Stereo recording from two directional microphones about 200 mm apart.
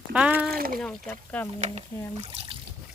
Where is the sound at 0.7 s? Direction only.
5° left (ahead or behind).